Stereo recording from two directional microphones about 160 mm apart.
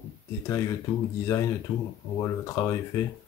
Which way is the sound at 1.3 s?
15° left (ahead or behind).